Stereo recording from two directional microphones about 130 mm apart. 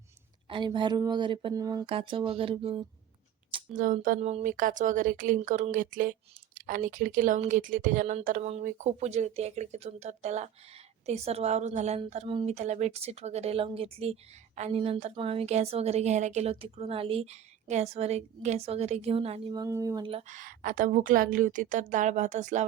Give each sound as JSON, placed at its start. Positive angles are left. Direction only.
{"t": 0.4, "sound": "speech", "side_deg": -40}
{"t": 1.5, "sound": "speech", "side_deg": -30}
{"t": 1.9, "sound": "a woman's voice", "side_deg": -45}
{"t": 3.7, "sound": "speech", "side_deg": -90}
{"t": 4.2, "sound": "speech", "side_deg": -55}
{"t": 4.4, "sound": "speech", "side_deg": -90}
{"t": 5.4, "sound": "speech", "side_deg": -60}
{"t": 8.6, "sound": "speech", "side_deg": -60}
{"t": 12.5, "sound": "a woman's voice", "side_deg": -60}
{"t": 19.5, "sound": "speech", "side_deg": -25}
{"t": 20.0, "sound": "a woman's voice", "side_deg": -45}
{"t": 20.2, "sound": "a woman's voice", "side_deg": -85}